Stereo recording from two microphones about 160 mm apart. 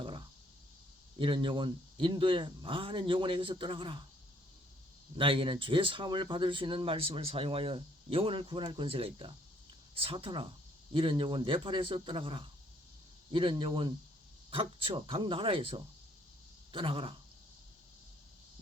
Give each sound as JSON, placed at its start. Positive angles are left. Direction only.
{"t": 0.0, "sound": "a sound", "side_deg": -30}
{"t": 1.2, "sound": "speech", "side_deg": -30}
{"t": 5.1, "sound": "speech", "side_deg": -35}